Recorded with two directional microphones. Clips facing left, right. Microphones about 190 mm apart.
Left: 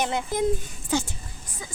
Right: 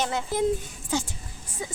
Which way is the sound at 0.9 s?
65° left (ahead or behind).